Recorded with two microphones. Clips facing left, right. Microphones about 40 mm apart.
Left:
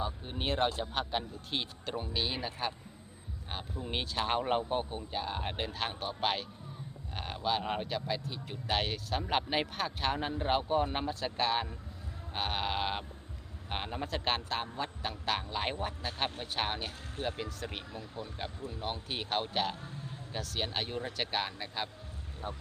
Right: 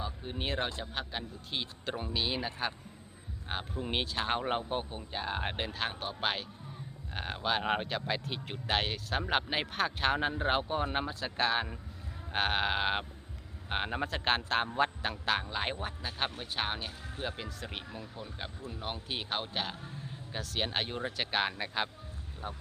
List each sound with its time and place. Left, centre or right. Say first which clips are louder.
0.0 s speech: left 1 dB; centre
1.8 s speech: right 1 dB; centre
3.5 s speech: right 4 dB; right
4.1 s speech: left 4 dB; centre
5.6 s speech: even; centre
9.7 s speech: right 3 dB; right
12.3 s speech: right 4 dB; right
14.5 s a man's voice: right 6 dB; right
15.0 s speech: right 2 dB; centre
18.3 s speech: left 2 dB; centre
18.7 s speech: right 2 dB; centre
20.6 s speech: right 2 dB; centre